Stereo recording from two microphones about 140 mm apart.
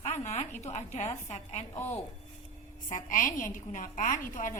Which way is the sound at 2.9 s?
70° left (ahead or behind).